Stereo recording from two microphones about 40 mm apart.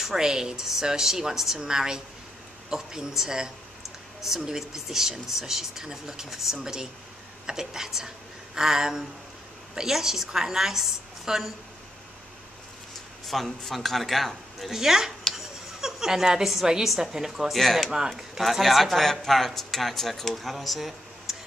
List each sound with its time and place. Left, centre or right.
0.0 s speech: centre
13.3 s speech: centre
14.8 s speech: centre
15.3 s a sound: centre
16.4 s speech: centre
17.5 s speech: centre
17.8 s speech: centre
18.1 s speech: centre